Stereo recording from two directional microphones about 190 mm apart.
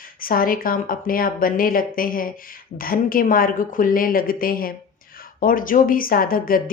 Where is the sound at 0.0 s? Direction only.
50° left (ahead or behind).